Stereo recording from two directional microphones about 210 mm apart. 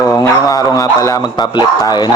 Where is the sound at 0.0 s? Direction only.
15° left (ahead or behind).